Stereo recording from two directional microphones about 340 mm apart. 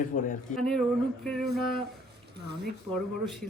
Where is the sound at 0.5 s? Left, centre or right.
Centre.